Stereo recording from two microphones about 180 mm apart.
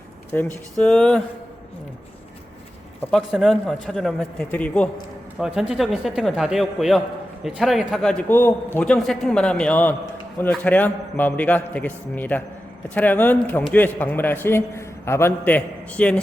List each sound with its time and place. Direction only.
0.3 s a man's voice: 10° left (ahead or behind)
3.0 s a man's voice: centre (ahead or behind)
5.4 s a man's voice: 5° right (ahead or behind)